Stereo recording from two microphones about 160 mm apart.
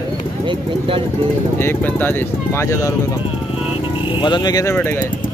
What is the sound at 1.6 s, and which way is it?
Speech, 10° left (ahead or behind).